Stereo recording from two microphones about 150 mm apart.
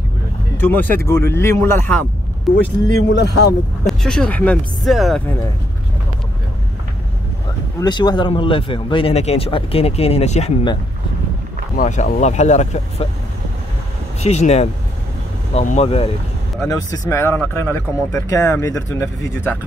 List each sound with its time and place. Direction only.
0.6 s speech: 10° left (ahead or behind)
2.5 s speech: centre (ahead or behind)
3.2 s speech: 90° left
3.8 s speech: 5° left (ahead or behind)
7.8 s speech: 30° left (ahead or behind); by 10.5 s 45° left (ahead or behind)
11.7 s speech: 55° left (ahead or behind)
14.2 s speech: 45° left (ahead or behind)
16.6 s speech: 25° left (ahead or behind)